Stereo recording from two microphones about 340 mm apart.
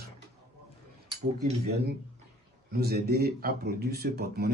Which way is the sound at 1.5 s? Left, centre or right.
Right.